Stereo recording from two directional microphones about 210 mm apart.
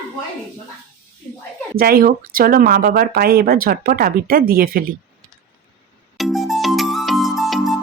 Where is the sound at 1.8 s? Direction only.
45° right (ahead or behind).